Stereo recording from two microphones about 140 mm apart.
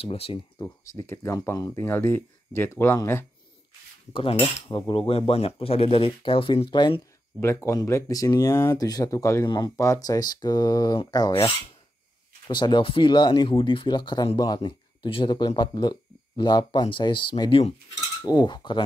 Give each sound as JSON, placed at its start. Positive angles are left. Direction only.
{"t": 0.0, "sound": "speech", "side_deg": 40}
{"t": 0.6, "sound": "speech", "side_deg": 25}
{"t": 4.1, "sound": "speech", "side_deg": 40}
{"t": 7.3, "sound": "speech", "side_deg": 20}
{"t": 18.2, "sound": "speech", "side_deg": 30}